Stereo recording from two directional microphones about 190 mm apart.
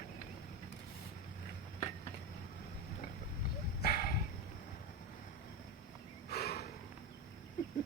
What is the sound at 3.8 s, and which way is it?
Dog, 50° left (ahead or behind).